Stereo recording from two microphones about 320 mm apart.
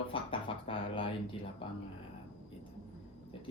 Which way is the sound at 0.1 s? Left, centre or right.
Centre.